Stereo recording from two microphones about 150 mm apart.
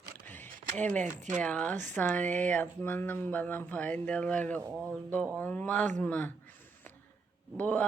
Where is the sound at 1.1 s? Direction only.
55° right (ahead or behind).